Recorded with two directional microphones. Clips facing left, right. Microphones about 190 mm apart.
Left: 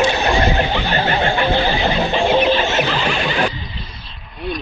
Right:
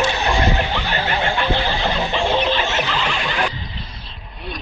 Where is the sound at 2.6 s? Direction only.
35° left (ahead or behind).